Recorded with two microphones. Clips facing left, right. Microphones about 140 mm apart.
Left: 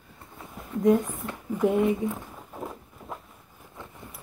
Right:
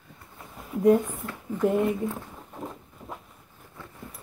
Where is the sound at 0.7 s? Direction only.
5° right (ahead or behind).